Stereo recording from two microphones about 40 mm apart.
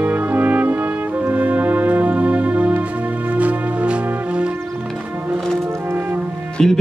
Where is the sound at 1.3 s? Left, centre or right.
Right.